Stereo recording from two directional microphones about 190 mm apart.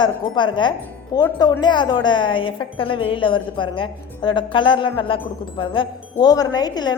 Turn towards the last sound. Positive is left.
turn(degrees=20)  # may be behind; listen again after turning